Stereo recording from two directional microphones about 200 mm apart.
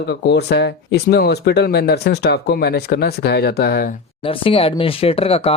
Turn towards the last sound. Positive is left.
turn(degrees=30)  # may be behind; listen again after turning